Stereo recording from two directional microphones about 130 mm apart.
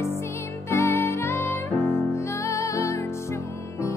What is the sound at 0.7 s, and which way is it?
Music, 20° left (ahead or behind).